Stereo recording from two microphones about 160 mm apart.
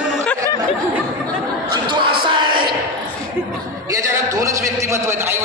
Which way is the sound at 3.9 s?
20° right (ahead or behind).